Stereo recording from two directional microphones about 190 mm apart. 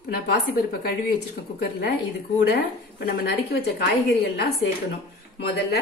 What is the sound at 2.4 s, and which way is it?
Speech, 60° left (ahead or behind).